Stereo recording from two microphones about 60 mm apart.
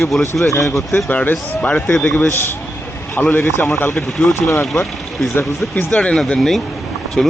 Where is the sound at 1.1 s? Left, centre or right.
Left.